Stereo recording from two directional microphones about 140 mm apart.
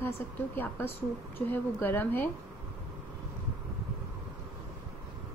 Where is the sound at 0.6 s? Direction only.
15° left (ahead or behind).